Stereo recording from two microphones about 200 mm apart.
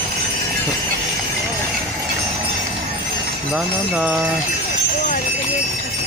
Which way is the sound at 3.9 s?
5° right (ahead or behind).